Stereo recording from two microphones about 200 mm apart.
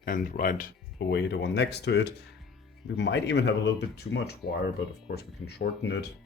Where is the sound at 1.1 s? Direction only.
60° left (ahead or behind).